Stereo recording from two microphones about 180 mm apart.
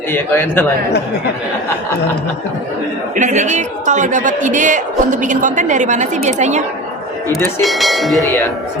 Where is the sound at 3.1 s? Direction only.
40° right (ahead or behind).